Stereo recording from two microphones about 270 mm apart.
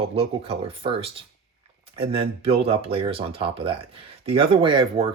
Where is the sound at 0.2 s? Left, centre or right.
Right.